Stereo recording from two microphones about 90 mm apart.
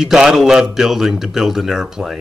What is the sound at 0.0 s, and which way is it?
Speech, 5° right (ahead or behind).